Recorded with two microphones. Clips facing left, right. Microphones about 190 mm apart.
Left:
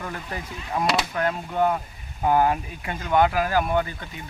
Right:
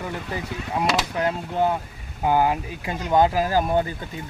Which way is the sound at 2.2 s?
15° right (ahead or behind).